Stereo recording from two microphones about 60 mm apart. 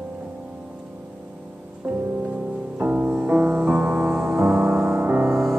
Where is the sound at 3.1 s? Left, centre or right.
Right.